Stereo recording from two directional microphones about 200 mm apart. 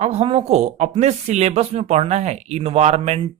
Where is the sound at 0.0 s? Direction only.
30° right (ahead or behind).